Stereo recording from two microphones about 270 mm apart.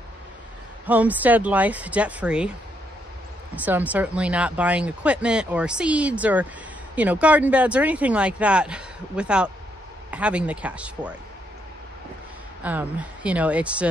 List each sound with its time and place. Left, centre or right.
0.8 s speech: centre
3.6 s speech: centre
12.6 s speech: centre